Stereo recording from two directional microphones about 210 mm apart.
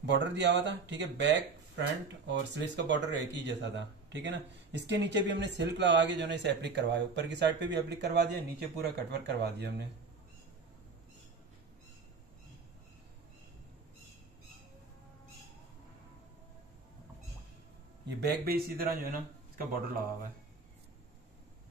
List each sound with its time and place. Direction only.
0.0 s speech: 55° right (ahead or behind)
18.0 s speech: 50° right (ahead or behind)